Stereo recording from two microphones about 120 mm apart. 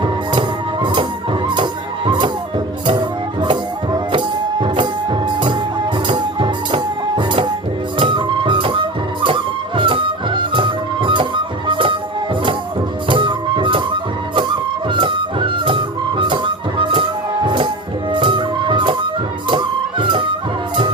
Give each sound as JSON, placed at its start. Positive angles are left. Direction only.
{"t": 0.0, "sound": "music", "side_deg": -40}
{"t": 13.1, "sound": "music", "side_deg": -40}